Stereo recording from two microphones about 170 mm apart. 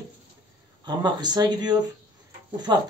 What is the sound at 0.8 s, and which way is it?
Speech, 25° right (ahead or behind).